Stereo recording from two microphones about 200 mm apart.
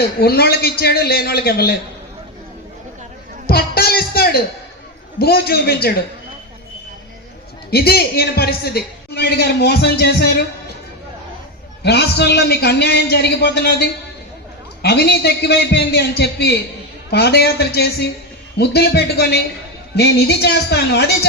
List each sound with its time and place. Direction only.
0.0 s a man's voice: 50° left (ahead or behind)
3.4 s a man's voice: 50° left (ahead or behind)
7.7 s a man's voice: 50° left (ahead or behind)
11.8 s a man's voice: 55° left (ahead or behind)